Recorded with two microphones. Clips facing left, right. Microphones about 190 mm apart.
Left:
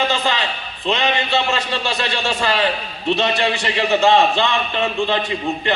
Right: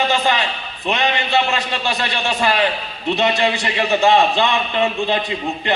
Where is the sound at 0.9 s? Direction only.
20° right (ahead or behind).